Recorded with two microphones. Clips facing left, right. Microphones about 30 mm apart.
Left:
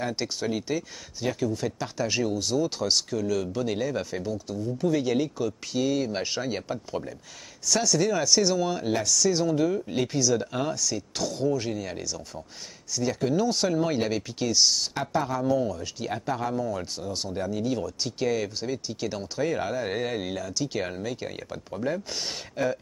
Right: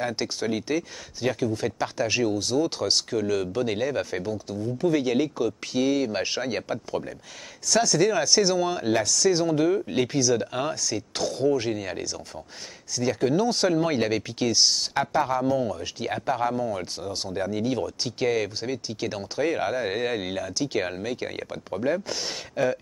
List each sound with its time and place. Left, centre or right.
0.0 s speech: centre
22.1 s speech: centre